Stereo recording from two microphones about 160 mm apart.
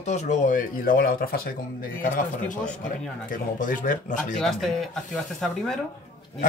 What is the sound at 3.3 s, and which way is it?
Speech, 55° left (ahead or behind).